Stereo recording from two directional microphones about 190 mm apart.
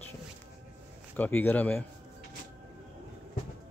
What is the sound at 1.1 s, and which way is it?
Speech, 10° left (ahead or behind).